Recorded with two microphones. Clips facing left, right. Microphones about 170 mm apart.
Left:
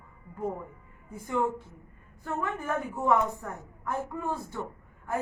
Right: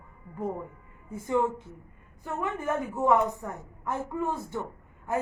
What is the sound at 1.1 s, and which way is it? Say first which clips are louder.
Speech: right 4 dB; 20° right (ahead or behind).